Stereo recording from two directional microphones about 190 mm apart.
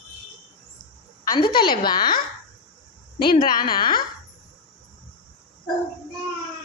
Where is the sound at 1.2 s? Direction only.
25° left (ahead or behind).